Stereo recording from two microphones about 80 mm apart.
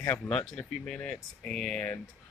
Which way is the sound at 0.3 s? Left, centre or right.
Centre.